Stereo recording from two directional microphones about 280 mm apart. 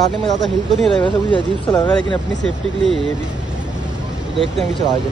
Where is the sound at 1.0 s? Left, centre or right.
Centre.